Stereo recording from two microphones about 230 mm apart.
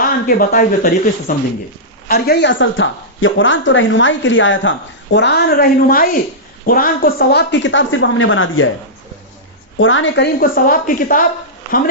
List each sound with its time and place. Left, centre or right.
0.3 s a woman's voice: left
9.7 s speech: left
10.4 s speech: left